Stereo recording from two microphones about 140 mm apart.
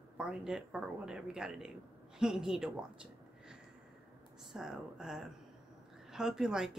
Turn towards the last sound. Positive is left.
turn(degrees=-5)  # may be behind; listen again after turning